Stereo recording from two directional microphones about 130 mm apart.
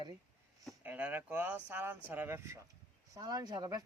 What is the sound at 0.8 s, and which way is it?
Speech, 15° right (ahead or behind).